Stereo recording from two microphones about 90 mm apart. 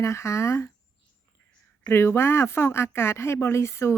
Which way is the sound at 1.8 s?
30° left (ahead or behind).